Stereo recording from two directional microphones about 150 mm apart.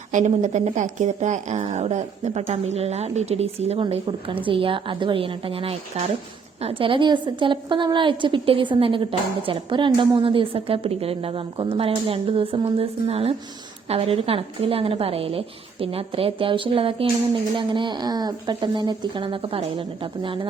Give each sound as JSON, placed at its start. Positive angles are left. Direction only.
{"t": 0.1, "sound": "a woman's voice", "side_deg": -55}